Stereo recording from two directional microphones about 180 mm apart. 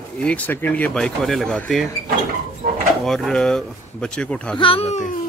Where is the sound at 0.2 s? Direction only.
10° left (ahead or behind).